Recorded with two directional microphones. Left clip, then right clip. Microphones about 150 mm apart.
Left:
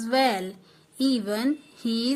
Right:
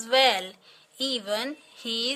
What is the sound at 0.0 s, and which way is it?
Speech, 20° right (ahead or behind).